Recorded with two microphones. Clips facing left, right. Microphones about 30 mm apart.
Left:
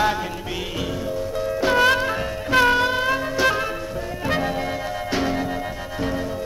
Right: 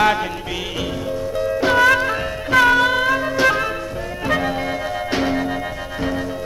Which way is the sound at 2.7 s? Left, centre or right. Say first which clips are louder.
Right 4 dB; right.